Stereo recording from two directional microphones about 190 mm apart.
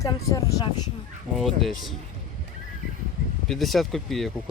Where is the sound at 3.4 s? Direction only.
Centre (ahead or behind).